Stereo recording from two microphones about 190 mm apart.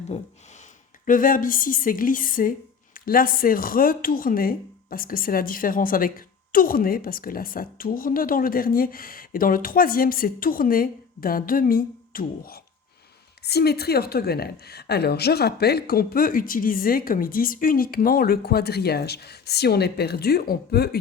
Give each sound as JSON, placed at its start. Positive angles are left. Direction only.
{"t": 0.1, "sound": "speech", "side_deg": 35}
{"t": 1.0, "sound": "a woman's voice", "side_deg": 45}